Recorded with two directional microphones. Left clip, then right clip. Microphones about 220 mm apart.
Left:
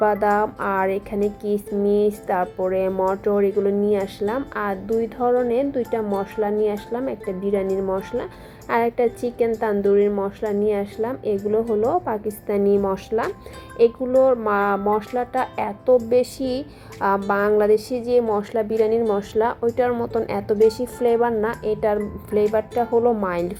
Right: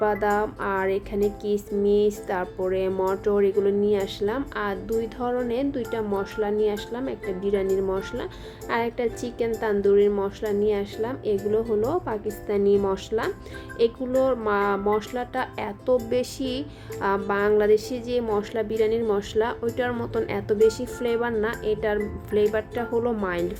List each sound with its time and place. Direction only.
0.0 s speech: 10° right (ahead or behind)